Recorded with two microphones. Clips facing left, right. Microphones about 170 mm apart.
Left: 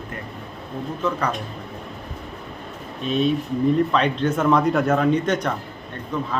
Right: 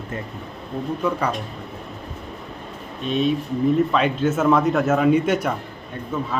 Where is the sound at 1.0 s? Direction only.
10° right (ahead or behind).